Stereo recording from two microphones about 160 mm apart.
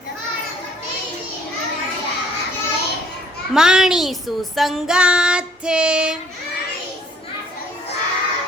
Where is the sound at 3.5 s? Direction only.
5° right (ahead or behind).